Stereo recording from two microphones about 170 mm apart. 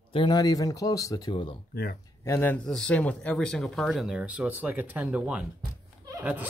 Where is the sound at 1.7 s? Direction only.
60° left (ahead or behind).